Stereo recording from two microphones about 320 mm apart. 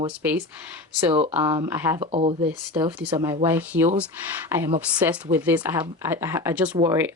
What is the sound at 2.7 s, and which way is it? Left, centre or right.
Speech, centre.